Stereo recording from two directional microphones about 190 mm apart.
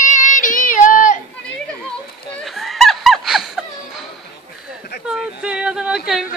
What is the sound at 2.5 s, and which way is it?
Snicker, centre (ahead or behind).